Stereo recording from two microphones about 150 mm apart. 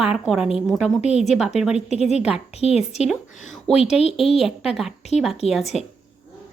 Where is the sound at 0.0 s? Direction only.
5° right (ahead or behind).